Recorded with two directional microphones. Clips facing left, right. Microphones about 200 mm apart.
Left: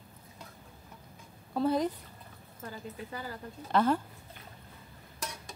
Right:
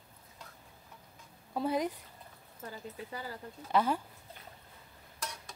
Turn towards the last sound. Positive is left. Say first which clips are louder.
# left 3 dB
turn(degrees=-10)  # may be behind; listen again after turning